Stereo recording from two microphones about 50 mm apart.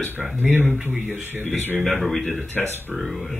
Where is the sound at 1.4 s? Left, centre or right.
Left.